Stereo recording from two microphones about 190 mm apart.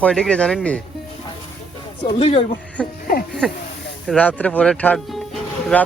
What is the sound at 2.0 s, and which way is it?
Speech, 30° left (ahead or behind).